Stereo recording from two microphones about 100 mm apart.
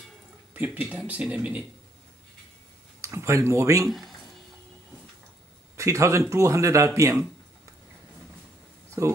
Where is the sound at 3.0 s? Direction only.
25° right (ahead or behind).